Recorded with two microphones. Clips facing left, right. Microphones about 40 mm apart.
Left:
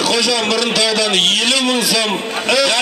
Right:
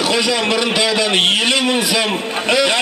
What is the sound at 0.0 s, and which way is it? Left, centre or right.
A man's voice, right.